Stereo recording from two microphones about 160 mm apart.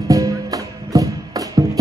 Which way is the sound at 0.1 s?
20° right (ahead or behind).